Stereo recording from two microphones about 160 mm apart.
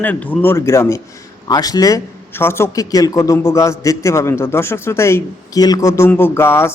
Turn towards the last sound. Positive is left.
turn(degrees=15)  # may be behind; listen again after turning